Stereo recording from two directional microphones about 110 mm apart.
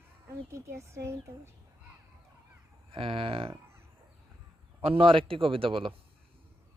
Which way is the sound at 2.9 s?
50° right (ahead or behind).